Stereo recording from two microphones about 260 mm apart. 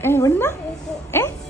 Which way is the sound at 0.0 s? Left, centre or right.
Centre.